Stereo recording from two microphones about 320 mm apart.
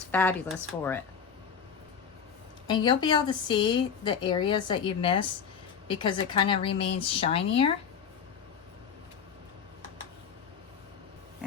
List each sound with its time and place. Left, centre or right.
0.1 s speech: centre
2.6 s a woman's voice: centre